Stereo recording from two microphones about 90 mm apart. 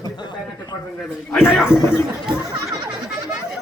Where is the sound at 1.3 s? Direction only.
5° right (ahead or behind).